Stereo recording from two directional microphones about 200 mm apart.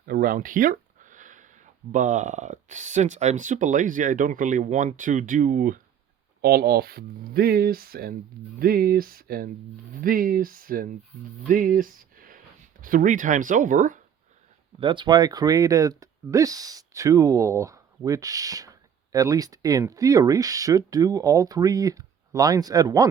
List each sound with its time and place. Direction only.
0.0 s speech: 45° right (ahead or behind)
14.8 s speech: 25° right (ahead or behind)